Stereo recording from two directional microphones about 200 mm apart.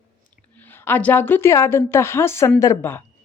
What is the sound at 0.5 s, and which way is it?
A woman's voice, 10° left (ahead or behind).